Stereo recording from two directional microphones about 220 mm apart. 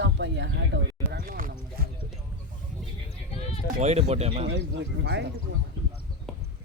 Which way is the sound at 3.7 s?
30° right (ahead or behind).